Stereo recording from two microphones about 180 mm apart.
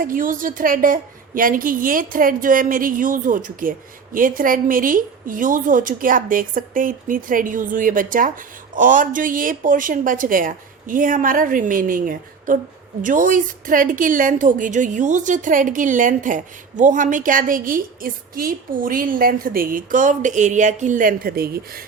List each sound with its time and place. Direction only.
0.0 s a woman's voice: 50° right (ahead or behind)